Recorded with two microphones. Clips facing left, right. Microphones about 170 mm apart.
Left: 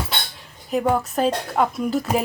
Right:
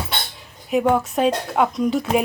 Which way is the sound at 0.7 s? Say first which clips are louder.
Right 2 dB; centre (ahead or behind).